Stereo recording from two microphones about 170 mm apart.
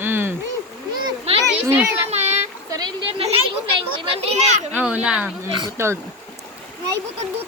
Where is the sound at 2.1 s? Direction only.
40° right (ahead or behind).